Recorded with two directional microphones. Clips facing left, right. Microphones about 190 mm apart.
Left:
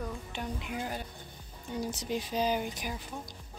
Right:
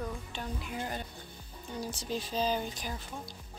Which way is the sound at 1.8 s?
20° left (ahead or behind).